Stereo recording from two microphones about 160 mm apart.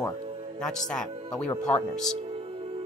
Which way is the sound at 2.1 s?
35° right (ahead or behind).